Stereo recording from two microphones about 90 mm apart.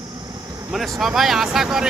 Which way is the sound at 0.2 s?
45° right (ahead or behind).